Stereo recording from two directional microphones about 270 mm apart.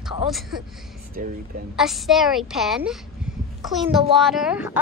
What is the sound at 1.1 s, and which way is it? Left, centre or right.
Speech, right.